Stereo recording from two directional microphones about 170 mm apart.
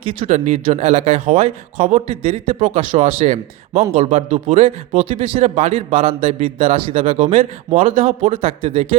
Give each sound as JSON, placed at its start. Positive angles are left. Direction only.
{"t": 0.0, "sound": "speech", "side_deg": -35}